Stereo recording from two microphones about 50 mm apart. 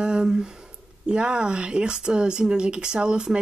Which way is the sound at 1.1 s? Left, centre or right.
Centre.